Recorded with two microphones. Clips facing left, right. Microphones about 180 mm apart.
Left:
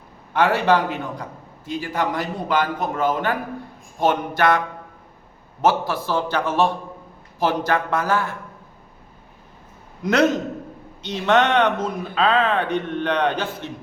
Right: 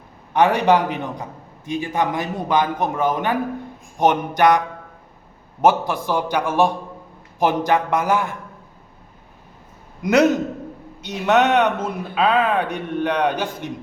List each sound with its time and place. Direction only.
0.3 s a man's voice: 15° right (ahead or behind)
5.6 s a man's voice: 15° right (ahead or behind)
10.0 s a man's voice: 10° right (ahead or behind)